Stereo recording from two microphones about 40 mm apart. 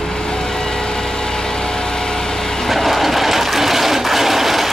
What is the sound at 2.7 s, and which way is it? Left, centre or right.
Train, centre.